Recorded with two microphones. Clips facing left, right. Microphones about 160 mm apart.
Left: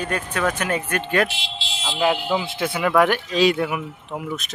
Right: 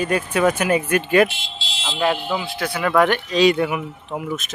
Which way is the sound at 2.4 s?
20° left (ahead or behind).